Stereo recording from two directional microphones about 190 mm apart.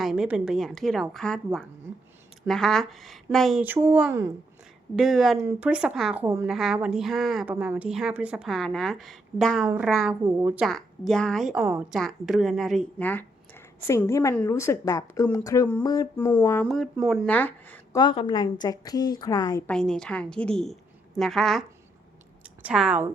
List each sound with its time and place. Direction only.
0.0 s speech: 5° right (ahead or behind)
2.5 s speech: centre (ahead or behind)
5.4 s speech: 10° right (ahead or behind)
6.2 s speech: 15° right (ahead or behind)
6.5 s speech: centre (ahead or behind)
11.6 s speech: 15° right (ahead or behind)
11.9 s speech: centre (ahead or behind); by 14.3 s 15° left (ahead or behind)
14.3 s a sound: 15° left (ahead or behind)
16.6 s speech: centre (ahead or behind)
17.9 s a woman's voice: 25° left (ahead or behind)
19.7 s speech: 5° left (ahead or behind)
22.6 s speech: 5° right (ahead or behind)